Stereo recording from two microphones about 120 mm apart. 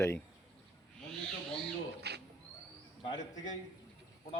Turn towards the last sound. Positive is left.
turn(degrees=35)  # may be behind; listen again after turning